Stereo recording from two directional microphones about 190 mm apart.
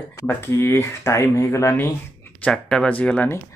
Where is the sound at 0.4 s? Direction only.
10° left (ahead or behind).